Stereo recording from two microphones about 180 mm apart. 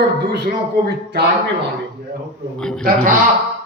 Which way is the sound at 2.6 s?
5° left (ahead or behind).